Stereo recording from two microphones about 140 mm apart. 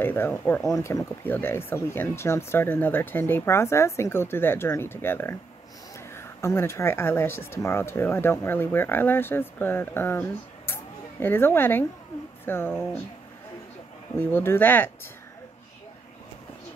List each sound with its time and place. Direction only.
0.0 s speech: 15° left (ahead or behind)
14.1 s speech: 15° left (ahead or behind)